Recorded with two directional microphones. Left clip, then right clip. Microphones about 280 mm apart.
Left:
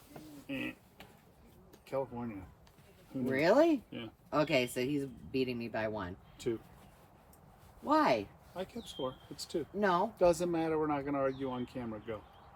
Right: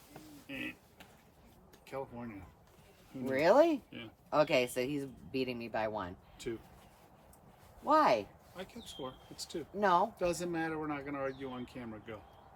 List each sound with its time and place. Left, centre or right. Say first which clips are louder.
0.4 s a sound: left 2 dB; centre
1.9 s speech: left 5 dB; centre
3.2 s speech: right 1 dB; centre
3.8 s speech: left 3 dB; centre
4.3 s speech: right 2 dB; centre
7.9 s speech: right 2 dB; centre
8.5 s speech: left 5 dB; centre
9.7 s speech: right 2 dB; centre
10.2 s speech: left 6 dB; centre